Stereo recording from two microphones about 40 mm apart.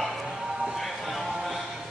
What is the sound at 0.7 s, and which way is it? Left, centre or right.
Music, centre.